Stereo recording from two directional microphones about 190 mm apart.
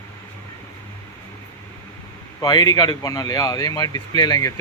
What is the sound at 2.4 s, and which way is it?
Speech, 20° left (ahead or behind).